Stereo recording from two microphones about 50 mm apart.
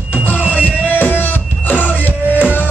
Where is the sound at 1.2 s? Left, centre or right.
Left.